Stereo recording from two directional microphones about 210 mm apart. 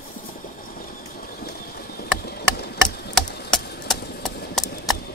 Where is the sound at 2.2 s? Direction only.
50° left (ahead or behind).